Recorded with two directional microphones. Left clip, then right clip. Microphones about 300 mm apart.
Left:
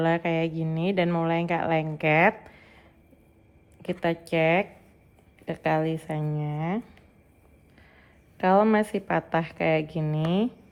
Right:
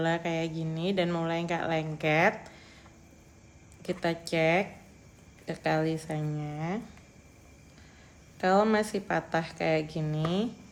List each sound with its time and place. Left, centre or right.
0.0 s speech: left
3.8 s speech: left
8.4 s speech: left